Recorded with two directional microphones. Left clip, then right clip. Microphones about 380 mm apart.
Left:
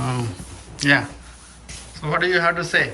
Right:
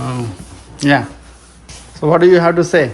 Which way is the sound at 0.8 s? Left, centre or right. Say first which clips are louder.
Right 4 dB; centre.